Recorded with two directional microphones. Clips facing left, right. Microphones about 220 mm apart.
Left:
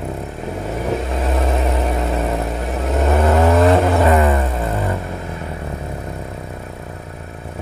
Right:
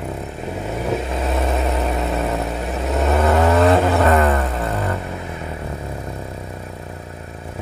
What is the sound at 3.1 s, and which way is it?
Vehicle, 10° left (ahead or behind).